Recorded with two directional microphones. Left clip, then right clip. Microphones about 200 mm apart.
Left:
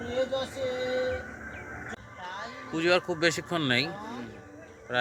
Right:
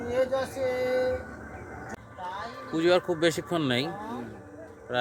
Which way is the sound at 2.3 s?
5° right (ahead or behind).